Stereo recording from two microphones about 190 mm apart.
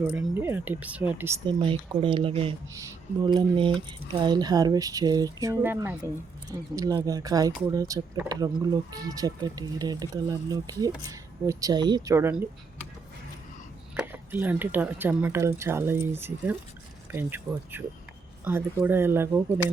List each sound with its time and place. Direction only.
0.2 s speech: 10° right (ahead or behind)
1.5 s speech: 25° right (ahead or behind)
13.9 s speech: 10° right (ahead or behind)